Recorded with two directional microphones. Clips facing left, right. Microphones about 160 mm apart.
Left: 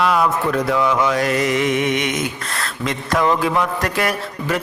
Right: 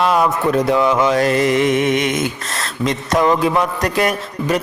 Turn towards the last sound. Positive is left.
turn(degrees=-20)  # may be behind; listen again after turning